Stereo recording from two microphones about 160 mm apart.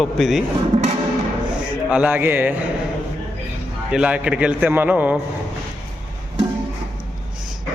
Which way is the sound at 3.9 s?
5° right (ahead or behind).